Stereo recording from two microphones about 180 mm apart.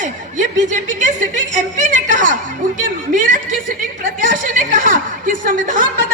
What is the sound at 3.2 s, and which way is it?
Chuckle, 45° right (ahead or behind).